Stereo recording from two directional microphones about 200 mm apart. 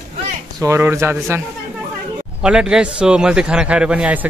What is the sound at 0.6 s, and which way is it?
Speech, 15° right (ahead or behind).